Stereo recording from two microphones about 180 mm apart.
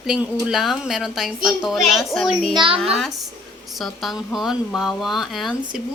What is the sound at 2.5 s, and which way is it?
Speech, 25° right (ahead or behind).